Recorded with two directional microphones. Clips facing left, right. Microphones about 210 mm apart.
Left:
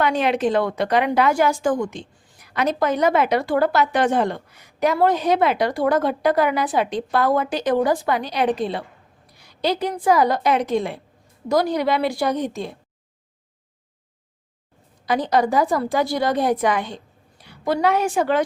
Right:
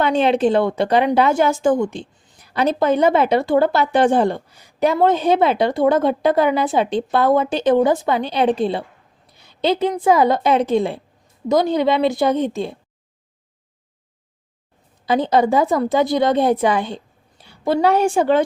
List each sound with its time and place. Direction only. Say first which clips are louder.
0.0 s a woman's voice: right 4 dB; 25° right (ahead or behind)
15.0 s speech: right 3 dB; 25° right (ahead or behind)